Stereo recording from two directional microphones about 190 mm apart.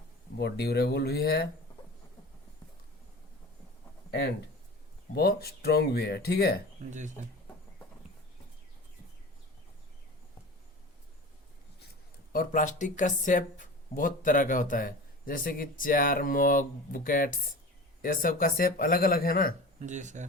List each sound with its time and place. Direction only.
0.3 s speech: 60° left (ahead or behind)
5.1 s speech: 55° left (ahead or behind)
12.3 s speech: 45° left (ahead or behind)
19.8 s speech: 40° right (ahead or behind)